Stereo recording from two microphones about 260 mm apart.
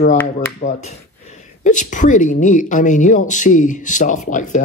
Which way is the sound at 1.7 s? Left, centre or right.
Left.